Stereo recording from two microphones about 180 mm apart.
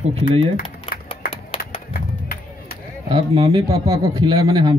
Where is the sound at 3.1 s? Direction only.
20° right (ahead or behind).